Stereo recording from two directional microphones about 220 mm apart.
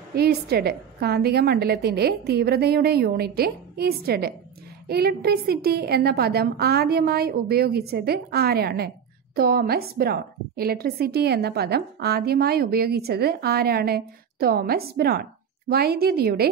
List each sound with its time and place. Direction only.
0.1 s a woman's voice: 45° right (ahead or behind)